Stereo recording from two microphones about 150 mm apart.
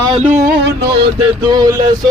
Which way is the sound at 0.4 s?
90° right.